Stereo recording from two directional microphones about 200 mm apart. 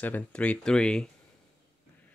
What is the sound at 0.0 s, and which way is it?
Speech, 5° left (ahead or behind).